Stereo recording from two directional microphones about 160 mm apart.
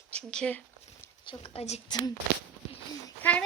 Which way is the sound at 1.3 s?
35° left (ahead or behind).